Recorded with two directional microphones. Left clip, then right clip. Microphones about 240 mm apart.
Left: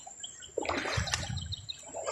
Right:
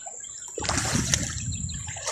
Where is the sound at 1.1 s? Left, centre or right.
Right.